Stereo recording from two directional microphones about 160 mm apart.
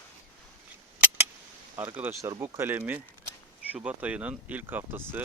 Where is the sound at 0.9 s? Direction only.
10° right (ahead or behind).